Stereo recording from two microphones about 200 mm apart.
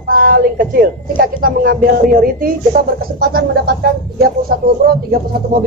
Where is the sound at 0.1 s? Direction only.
45° right (ahead or behind).